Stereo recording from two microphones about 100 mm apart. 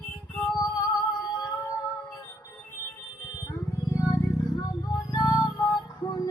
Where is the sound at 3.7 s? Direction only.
35° left (ahead or behind).